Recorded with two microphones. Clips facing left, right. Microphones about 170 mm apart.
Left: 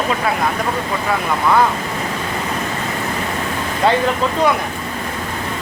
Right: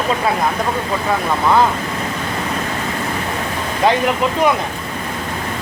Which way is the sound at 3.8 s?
15° right (ahead or behind).